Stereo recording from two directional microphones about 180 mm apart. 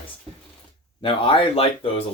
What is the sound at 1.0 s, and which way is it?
Speech, 30° left (ahead or behind).